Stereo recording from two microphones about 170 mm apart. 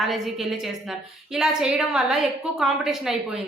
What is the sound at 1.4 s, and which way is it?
A woman's voice, 5° right (ahead or behind).